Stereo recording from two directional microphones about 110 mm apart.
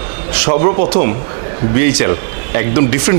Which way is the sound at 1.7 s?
15° right (ahead or behind).